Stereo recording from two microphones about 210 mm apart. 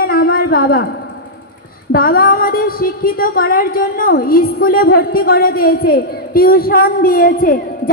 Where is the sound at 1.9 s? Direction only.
45° left (ahead or behind).